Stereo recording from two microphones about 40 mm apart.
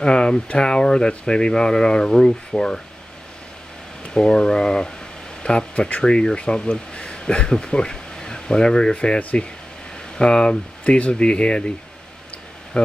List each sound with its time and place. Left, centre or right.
0.0 s speech: left
4.1 s speech: centre
10.8 s speech: left
12.7 s speech: left